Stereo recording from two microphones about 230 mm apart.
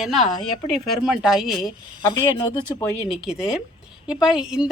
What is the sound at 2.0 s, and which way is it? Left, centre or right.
Speech, centre.